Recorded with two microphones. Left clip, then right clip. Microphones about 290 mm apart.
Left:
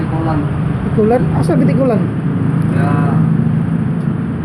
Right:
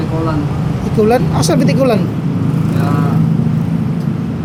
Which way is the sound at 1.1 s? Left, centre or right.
Right.